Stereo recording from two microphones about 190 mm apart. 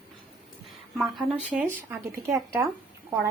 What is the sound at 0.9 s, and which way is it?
Speech, centre (ahead or behind).